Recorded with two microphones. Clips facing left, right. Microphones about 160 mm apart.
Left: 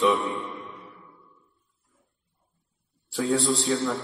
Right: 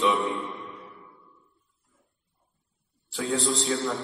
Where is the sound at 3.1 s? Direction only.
45° left (ahead or behind).